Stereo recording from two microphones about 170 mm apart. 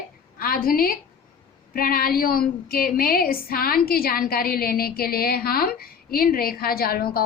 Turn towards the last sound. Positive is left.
turn(degrees=60)  # may be behind; listen again after turning